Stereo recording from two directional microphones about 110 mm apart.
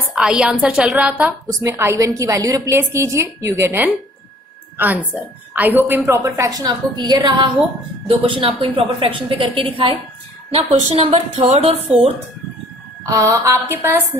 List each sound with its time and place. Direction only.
0.1 s a woman's voice: 5° right (ahead or behind)
1.5 s a woman's voice: 30° right (ahead or behind)
6.1 s a woman's voice: 30° right (ahead or behind); by 9.9 s 55° right (ahead or behind)
10.5 s speech: 70° right (ahead or behind)
13.0 s a woman's voice: 30° right (ahead or behind)